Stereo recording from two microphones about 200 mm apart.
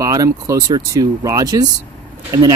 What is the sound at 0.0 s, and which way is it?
Speech, 15° right (ahead or behind).